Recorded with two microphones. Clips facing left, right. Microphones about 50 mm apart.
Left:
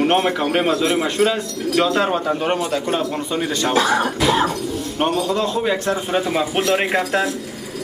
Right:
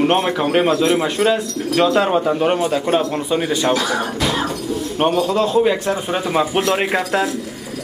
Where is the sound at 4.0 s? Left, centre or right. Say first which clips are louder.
Left 3 dB; centre.